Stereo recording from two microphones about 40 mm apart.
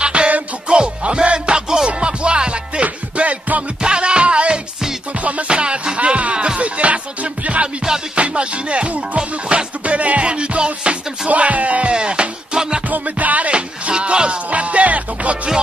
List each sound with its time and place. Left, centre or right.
0.0 s music: right
3.8 s music: right
6.3 s music: right
6.6 s music: right
7.6 s music: centre
8.2 s music: right
11.2 s music: right
11.9 s music: right
12.9 s music: right
13.5 s music: right